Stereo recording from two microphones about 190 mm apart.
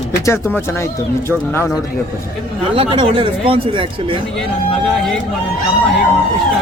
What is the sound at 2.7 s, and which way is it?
A man's voice, 30° right (ahead or behind).